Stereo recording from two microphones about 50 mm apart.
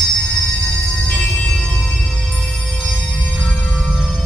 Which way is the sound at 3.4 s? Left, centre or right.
Centre.